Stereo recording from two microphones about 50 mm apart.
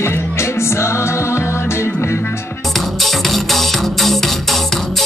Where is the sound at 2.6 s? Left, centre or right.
Centre.